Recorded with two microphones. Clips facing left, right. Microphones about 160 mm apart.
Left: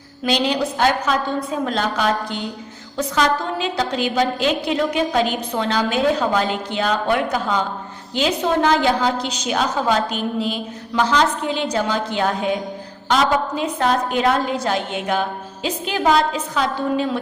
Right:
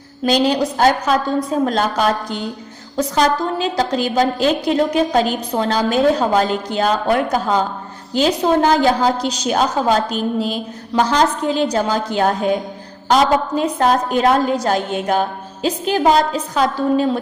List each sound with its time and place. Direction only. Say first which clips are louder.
0.3 s a woman's voice: right 4 dB; 40° right (ahead or behind)